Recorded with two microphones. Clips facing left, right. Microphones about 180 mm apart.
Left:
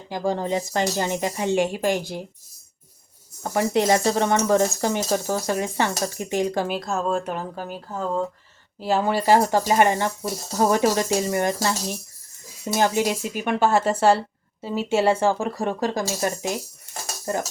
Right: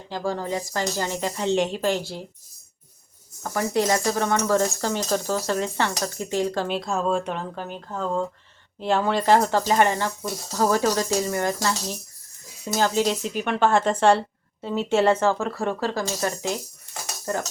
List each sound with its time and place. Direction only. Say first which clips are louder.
0.1 s speech: left 3 dB; 20° left (ahead or behind)
3.4 s speech: left 2 dB; 20° left (ahead or behind)
6.7 s speech: even; centre (ahead or behind)